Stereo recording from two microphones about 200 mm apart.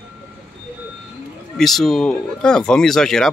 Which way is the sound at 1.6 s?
Centre (ahead or behind).